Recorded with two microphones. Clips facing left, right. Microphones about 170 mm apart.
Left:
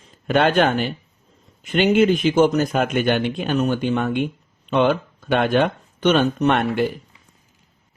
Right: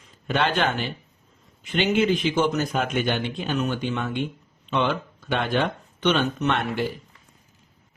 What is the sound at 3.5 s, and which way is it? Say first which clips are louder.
A man's voice: left 6 dB; 45° left (ahead or behind).